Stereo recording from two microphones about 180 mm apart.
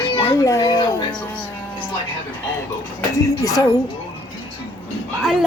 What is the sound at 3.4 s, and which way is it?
Speech, 20° left (ahead or behind).